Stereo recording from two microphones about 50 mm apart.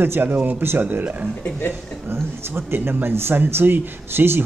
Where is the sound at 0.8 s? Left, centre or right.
Right.